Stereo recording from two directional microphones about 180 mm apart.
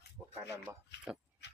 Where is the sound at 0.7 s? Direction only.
15° right (ahead or behind).